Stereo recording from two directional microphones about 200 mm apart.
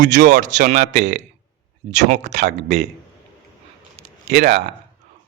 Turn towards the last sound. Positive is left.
turn(degrees=-35)  # may be behind; listen again after turning